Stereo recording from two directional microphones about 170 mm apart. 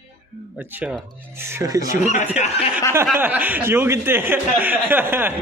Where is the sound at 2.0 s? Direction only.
45° left (ahead or behind).